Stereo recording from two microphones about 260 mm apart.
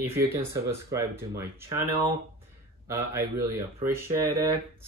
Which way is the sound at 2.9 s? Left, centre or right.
Centre.